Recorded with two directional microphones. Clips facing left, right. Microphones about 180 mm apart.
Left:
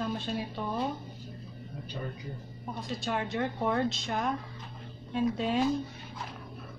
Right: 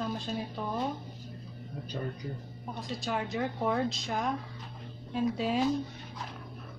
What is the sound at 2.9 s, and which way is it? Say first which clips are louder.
A woman's voice: left 1 dB; centre (ahead or behind).